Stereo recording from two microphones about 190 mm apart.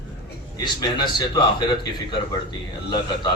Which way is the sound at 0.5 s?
20° left (ahead or behind).